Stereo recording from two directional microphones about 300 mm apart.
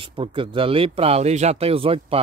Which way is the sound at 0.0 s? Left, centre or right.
Centre.